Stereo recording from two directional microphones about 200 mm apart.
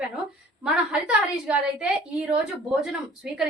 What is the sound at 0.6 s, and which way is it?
A woman's voice, 5° right (ahead or behind).